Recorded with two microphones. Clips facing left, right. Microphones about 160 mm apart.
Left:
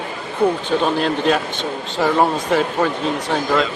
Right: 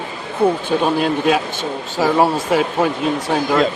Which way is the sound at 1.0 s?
5° right (ahead or behind).